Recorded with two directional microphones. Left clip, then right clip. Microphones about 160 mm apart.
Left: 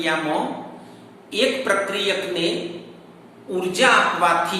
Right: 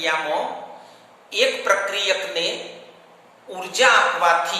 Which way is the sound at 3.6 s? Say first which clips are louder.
Even; 25° right (ahead or behind).